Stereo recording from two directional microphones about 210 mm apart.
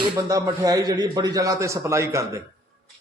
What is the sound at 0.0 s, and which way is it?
A man's voice, 15° right (ahead or behind).